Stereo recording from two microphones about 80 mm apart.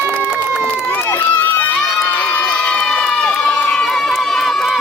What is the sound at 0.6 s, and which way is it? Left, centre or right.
Run, centre.